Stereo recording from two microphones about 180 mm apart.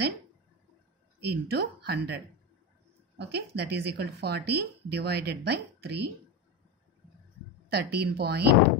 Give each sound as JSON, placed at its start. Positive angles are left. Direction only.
{"t": 1.2, "sound": "a woman's voice", "side_deg": -65}
{"t": 7.7, "sound": "a woman's voice", "side_deg": -65}